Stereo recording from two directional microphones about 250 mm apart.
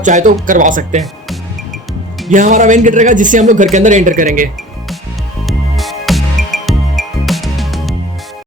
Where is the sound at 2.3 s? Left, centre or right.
Right.